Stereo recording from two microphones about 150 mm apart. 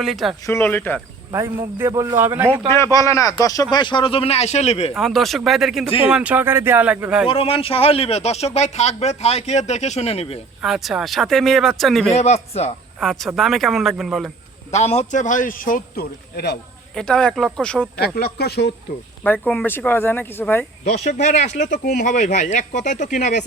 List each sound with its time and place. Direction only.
0.0 s speech: centre (ahead or behind)
0.4 s speech: 15° left (ahead or behind)
1.3 s a man's voice: 15° right (ahead or behind)
2.6 s speech: 20° left (ahead or behind); by 4.9 s 45° left (ahead or behind)
4.9 s a man's voice: centre (ahead or behind)
7.3 s a man's voice: 40° left (ahead or behind)
10.6 s speech: centre (ahead or behind)
12.1 s a man's voice: 45° left (ahead or behind)
13.0 s speech: centre (ahead or behind)
14.7 s a man's voice: 45° left (ahead or behind); by 16.6 s 90° left
16.9 s speech: 5° left (ahead or behind)
18.0 s speech: 90° left
19.2 s speech: 10° left (ahead or behind)
20.8 s a man's voice: 50° left (ahead or behind)